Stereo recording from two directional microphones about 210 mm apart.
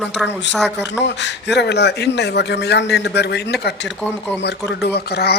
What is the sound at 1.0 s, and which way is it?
A man's voice, 55° left (ahead or behind).